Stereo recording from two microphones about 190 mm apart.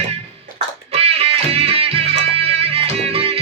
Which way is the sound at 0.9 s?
30° right (ahead or behind).